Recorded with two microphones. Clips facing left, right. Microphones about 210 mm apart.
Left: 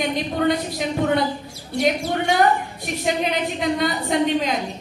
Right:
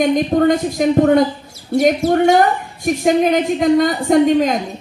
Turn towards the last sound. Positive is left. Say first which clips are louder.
# right 8 dB
turn(degrees=-45)  # may be behind; listen again after turning